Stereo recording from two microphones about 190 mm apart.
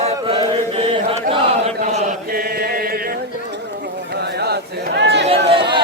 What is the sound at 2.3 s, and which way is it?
Chant, 50° right (ahead or behind).